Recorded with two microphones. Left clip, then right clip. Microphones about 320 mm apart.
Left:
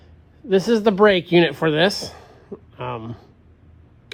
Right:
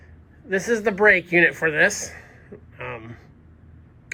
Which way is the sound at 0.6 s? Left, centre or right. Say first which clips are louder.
Left 2 dB; centre.